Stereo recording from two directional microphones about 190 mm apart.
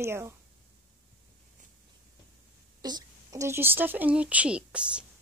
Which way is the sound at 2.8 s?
20° right (ahead or behind).